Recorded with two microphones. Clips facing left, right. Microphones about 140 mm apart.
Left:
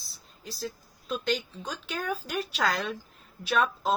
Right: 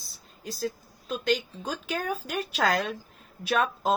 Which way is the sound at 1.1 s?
35° right (ahead or behind).